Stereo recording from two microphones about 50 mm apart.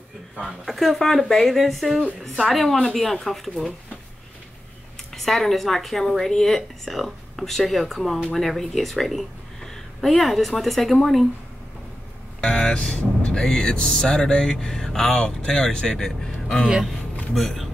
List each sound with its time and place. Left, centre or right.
0.4 s a woman's voice: centre
5.1 s a woman's voice: centre
12.4 s speech: centre
13.3 s music: centre
17.3 s speech: centre